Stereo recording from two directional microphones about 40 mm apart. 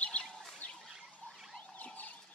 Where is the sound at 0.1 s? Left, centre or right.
Left.